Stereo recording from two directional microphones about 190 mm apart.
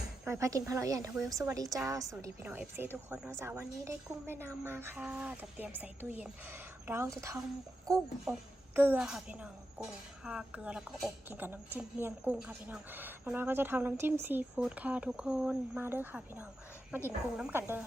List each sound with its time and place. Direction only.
0.3 s a woman's voice: 15° right (ahead or behind)